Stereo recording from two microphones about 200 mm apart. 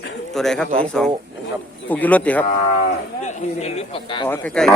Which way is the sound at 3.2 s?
30° left (ahead or behind).